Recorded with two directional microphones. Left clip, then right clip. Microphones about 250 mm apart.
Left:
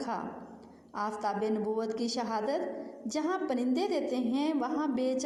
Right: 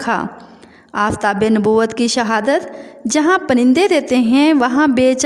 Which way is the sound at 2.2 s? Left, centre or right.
Right.